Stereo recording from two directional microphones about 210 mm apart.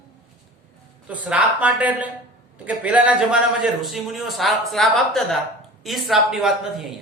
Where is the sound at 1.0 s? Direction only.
5° right (ahead or behind).